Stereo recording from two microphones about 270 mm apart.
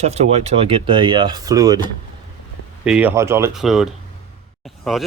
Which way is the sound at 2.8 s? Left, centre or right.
Centre.